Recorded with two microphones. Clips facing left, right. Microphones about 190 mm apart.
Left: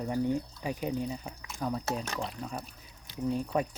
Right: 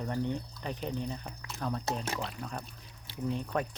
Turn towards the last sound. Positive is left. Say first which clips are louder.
# left 3 dB
turn(degrees=5)  # may be behind; listen again after turning